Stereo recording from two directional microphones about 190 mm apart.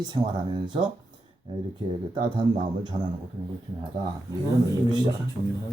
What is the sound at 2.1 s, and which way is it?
Speech, 20° right (ahead or behind).